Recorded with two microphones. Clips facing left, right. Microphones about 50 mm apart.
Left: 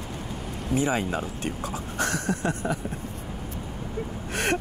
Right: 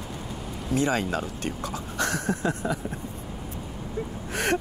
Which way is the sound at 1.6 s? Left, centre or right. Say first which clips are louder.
Even; left.